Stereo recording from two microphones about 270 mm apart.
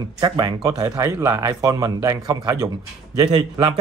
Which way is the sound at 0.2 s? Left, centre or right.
Centre.